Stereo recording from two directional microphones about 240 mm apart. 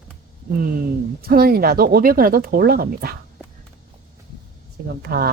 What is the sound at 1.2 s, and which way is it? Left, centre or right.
Speech, right.